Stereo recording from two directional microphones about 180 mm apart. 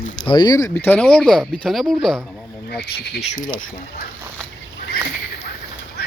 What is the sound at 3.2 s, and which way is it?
Speech, 35° left (ahead or behind).